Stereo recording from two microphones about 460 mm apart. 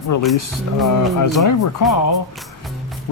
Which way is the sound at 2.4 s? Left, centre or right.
Centre.